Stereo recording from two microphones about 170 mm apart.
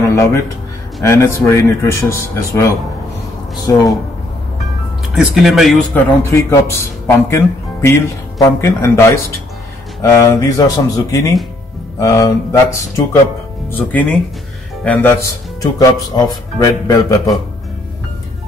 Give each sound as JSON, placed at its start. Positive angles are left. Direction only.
{"t": 0.1, "sound": "a sound", "side_deg": 20}
{"t": 1.0, "sound": "speech", "side_deg": 15}
{"t": 5.1, "sound": "speech", "side_deg": -5}
{"t": 5.9, "sound": "speech", "side_deg": 15}
{"t": 15.6, "sound": "speech", "side_deg": 20}